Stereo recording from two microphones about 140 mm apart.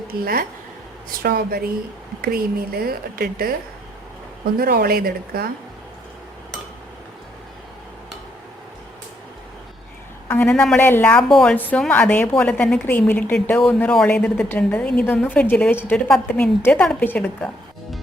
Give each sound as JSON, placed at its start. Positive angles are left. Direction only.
{"t": 0.1, "sound": "speech", "side_deg": -90}
{"t": 4.5, "sound": "speech", "side_deg": -90}
{"t": 10.2, "sound": "a man's voice", "side_deg": 15}
{"t": 10.5, "sound": "a woman's voice", "side_deg": 5}
{"t": 10.8, "sound": "a woman's voice", "side_deg": 15}
{"t": 11.9, "sound": "a woman's voice", "side_deg": 10}